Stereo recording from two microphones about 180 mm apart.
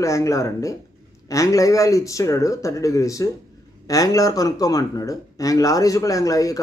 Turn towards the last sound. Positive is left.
turn(degrees=20)  # may be behind; listen again after turning